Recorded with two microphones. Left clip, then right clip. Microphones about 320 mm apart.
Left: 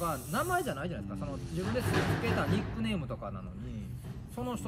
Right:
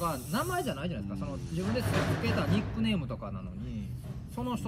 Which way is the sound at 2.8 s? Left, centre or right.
Centre.